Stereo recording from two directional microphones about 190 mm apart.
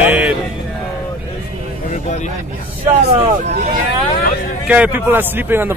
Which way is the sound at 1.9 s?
40° left (ahead or behind).